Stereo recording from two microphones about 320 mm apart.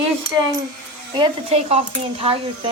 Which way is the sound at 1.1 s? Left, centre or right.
Centre.